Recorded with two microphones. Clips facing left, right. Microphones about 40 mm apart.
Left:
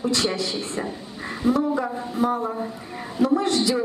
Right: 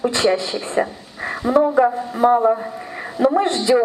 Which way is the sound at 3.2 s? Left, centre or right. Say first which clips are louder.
Right 4 dB; right.